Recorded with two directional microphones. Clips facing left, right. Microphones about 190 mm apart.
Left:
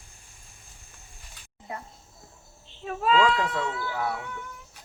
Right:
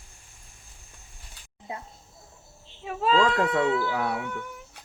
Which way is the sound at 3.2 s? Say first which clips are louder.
Right 3 dB; 50° right (ahead or behind).